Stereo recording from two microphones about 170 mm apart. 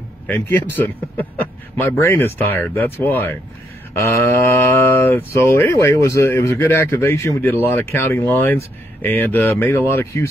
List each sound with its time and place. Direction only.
0.3 s speech: 10° left (ahead or behind)